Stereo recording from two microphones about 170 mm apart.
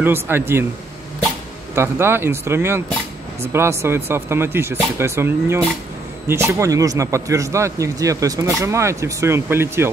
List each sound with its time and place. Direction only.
0.0 s a man's voice: 10° right (ahead or behind)
1.8 s a man's voice: 15° right (ahead or behind)